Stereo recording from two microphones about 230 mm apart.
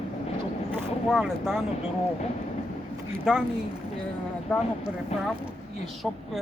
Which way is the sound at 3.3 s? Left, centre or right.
Centre.